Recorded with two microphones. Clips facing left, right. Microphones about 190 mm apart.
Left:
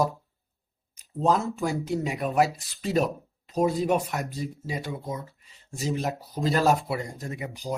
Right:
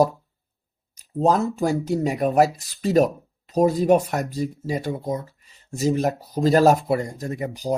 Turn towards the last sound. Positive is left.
turn(degrees=-40)  # may be behind; listen again after turning